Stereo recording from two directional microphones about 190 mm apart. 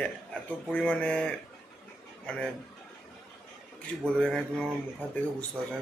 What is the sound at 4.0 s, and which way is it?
Speech, 5° left (ahead or behind).